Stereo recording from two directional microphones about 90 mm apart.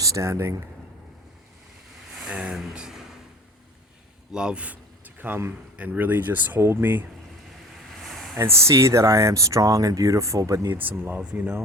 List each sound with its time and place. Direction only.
0.0 s speech: 35° right (ahead or behind)
2.1 s vehicle: 10° right (ahead or behind)
2.6 s speech: 5° right (ahead or behind)
4.3 s a man's voice: 10° right (ahead or behind); by 7.0 s 25° right (ahead or behind)
8.4 s speech: 30° right (ahead or behind)
10.8 s speech: 20° right (ahead or behind)